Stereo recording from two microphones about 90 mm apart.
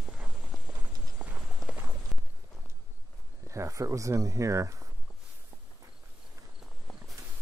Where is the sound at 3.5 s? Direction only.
35° right (ahead or behind).